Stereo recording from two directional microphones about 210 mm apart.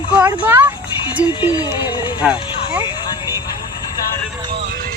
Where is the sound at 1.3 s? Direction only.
20° left (ahead or behind).